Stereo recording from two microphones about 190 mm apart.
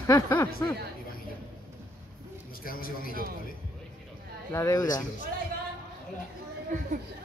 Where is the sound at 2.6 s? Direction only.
50° left (ahead or behind).